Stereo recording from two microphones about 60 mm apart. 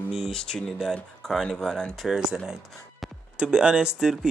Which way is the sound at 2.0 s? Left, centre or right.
Centre.